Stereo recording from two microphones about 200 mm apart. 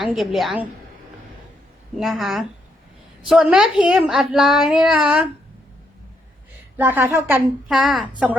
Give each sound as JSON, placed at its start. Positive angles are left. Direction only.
{"t": 0.1, "sound": "child singing", "side_deg": 0}
{"t": 2.0, "sound": "child singing", "side_deg": 0}
{"t": 6.7, "sound": "a woman's voice", "side_deg": -10}